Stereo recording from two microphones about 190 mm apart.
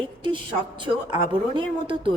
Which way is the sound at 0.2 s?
25° right (ahead or behind).